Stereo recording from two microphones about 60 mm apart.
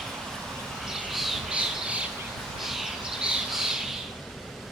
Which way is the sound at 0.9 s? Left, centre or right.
Centre.